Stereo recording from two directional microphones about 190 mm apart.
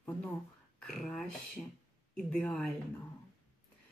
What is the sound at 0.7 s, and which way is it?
Speech, 5° left (ahead or behind).